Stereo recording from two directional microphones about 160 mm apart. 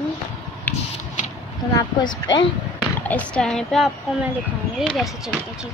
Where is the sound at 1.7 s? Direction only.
25° left (ahead or behind).